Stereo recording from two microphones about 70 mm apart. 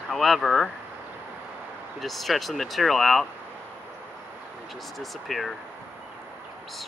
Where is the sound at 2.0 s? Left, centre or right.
Centre.